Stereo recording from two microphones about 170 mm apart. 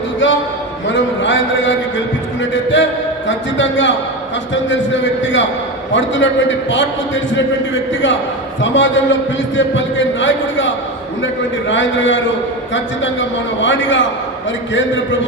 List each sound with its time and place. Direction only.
0.9 s a man's voice: 90° left
11.7 s a man's voice: 90° left